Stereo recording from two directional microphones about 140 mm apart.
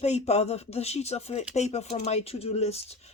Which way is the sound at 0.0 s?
50° left (ahead or behind).